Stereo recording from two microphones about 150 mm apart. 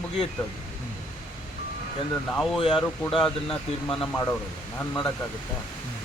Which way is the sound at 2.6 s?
35° left (ahead or behind).